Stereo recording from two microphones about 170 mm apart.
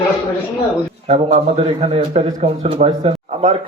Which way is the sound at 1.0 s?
35° right (ahead or behind).